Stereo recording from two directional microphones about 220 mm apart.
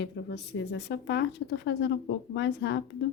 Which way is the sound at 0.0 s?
50° left (ahead or behind).